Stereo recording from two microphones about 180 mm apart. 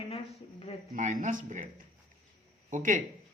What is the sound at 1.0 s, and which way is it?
Speech, 45° right (ahead or behind).